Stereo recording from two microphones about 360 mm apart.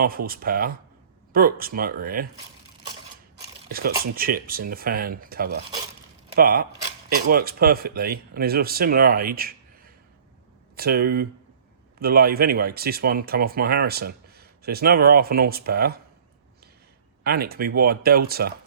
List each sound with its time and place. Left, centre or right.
0.3 s speech: right
3.7 s speech: right
10.8 s speech: right
17.2 s speech: right